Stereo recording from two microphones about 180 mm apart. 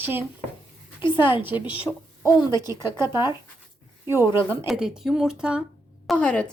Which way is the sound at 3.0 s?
25° left (ahead or behind).